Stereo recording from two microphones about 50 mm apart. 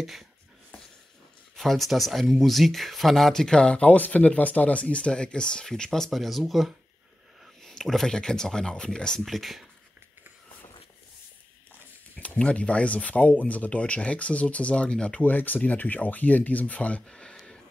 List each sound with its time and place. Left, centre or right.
0.0 s speech: centre
1.6 s speech: centre
9.2 s speech: centre
12.2 s speech: left
15.2 s speech: left
17.0 s speech: centre